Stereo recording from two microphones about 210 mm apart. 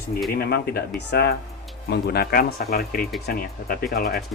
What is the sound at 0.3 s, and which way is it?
Speech, 50° left (ahead or behind).